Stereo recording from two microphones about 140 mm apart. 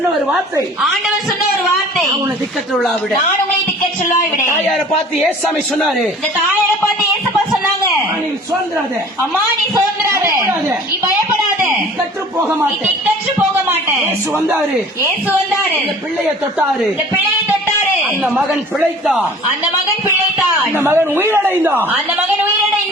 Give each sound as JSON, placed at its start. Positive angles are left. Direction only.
{"t": 0.8, "sound": "a man's voice", "side_deg": 0}
{"t": 2.7, "sound": "a man's voice", "side_deg": 0}
{"t": 4.7, "sound": "a man's voice", "side_deg": 0}
{"t": 9.7, "sound": "a sound", "side_deg": -20}
{"t": 18.2, "sound": "a man's voice", "side_deg": -5}
{"t": 20.7, "sound": "speech", "side_deg": -15}